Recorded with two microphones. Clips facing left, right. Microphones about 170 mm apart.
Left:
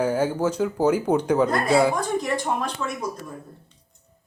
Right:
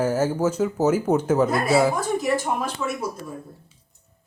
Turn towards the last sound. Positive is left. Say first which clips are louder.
# right 1 dB
turn(degrees=-5)  # may be behind; listen again after turning